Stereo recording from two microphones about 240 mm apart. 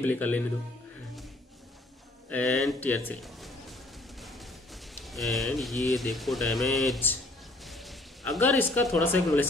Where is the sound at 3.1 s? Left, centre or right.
Centre.